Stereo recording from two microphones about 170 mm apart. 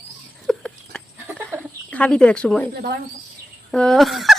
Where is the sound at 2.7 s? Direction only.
65° right (ahead or behind).